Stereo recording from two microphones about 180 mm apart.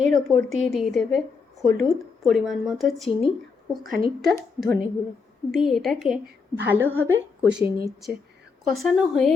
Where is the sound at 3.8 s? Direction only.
55° right (ahead or behind).